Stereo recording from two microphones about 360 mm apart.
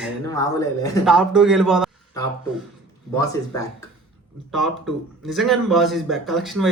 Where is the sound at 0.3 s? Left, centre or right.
Centre.